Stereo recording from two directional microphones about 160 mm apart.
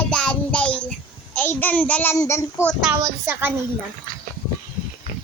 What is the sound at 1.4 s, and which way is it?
A child's voice, 10° left (ahead or behind).